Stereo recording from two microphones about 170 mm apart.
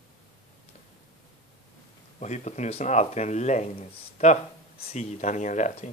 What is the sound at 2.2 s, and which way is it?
Speech, 45° left (ahead or behind).